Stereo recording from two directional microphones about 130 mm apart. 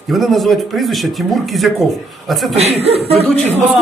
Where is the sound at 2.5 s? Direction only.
50° right (ahead or behind).